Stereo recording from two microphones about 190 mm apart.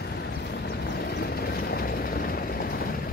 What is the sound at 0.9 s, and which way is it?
Vehicle, 55° left (ahead or behind).